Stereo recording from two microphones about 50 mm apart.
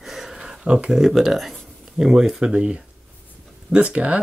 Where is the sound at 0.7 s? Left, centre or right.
Right.